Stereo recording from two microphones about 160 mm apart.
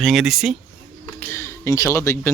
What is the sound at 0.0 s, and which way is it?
Speech, centre (ahead or behind).